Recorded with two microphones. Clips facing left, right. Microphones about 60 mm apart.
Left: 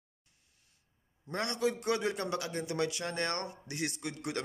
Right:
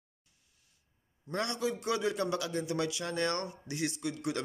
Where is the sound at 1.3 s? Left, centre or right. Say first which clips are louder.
Right 1 dB; left.